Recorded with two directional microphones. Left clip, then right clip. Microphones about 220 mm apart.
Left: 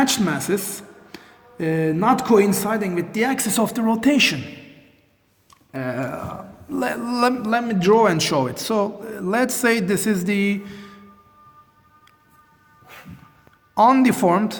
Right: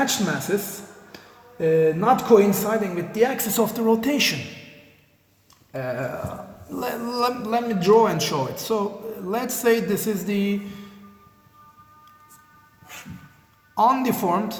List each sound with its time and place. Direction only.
0.0 s a man's voice: 45° left (ahead or behind)
5.8 s a man's voice: 40° left (ahead or behind)
10.7 s a sound: 45° left (ahead or behind)
13.7 s a man's voice: 40° left (ahead or behind)